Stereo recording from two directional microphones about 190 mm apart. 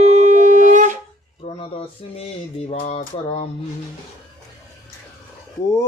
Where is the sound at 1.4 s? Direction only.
30° left (ahead or behind).